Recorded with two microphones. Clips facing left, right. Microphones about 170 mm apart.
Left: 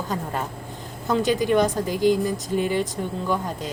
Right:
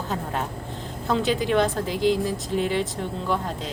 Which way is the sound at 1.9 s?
50° left (ahead or behind).